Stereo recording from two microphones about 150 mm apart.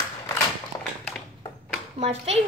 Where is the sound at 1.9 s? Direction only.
45° right (ahead or behind).